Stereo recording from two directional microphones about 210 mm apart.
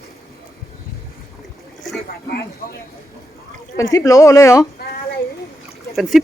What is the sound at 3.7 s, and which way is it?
Speech, 15° left (ahead or behind).